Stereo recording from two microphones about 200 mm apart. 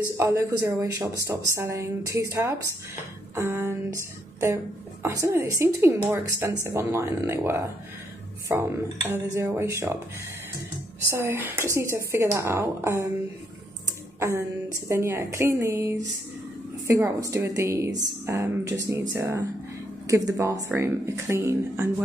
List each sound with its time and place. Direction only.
0.2 s a woman's voice: 15° right (ahead or behind)
11.1 s a woman's voice: 10° right (ahead or behind)
14.9 s a woman's voice: 15° right (ahead or behind)